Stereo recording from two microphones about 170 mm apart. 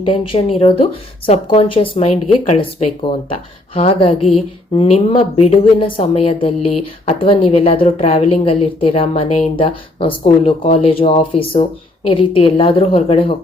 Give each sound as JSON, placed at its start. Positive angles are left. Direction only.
{"t": 0.0, "sound": "a woman's voice", "side_deg": 30}